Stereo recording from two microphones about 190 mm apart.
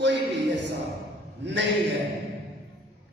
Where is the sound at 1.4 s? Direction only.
65° right (ahead or behind).